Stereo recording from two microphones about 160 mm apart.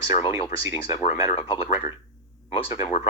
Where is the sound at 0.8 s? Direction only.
35° left (ahead or behind).